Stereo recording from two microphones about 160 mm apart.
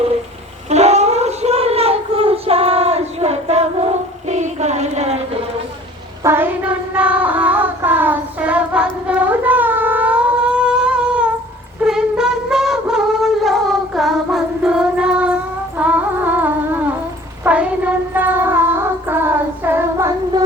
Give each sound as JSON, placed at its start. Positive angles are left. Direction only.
{"t": 0.7, "sound": "a sound", "side_deg": -45}
{"t": 6.2, "sound": "child singing", "side_deg": -15}
{"t": 11.8, "sound": "a sound", "side_deg": -5}
{"t": 13.4, "sound": "child singing", "side_deg": 0}
{"t": 15.8, "sound": "music", "side_deg": -10}
{"t": 17.4, "sound": "child singing", "side_deg": -5}